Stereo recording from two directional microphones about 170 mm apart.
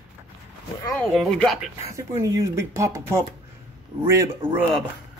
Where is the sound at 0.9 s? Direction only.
5° left (ahead or behind).